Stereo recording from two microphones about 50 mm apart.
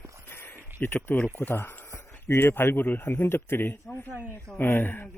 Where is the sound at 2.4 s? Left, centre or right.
Left.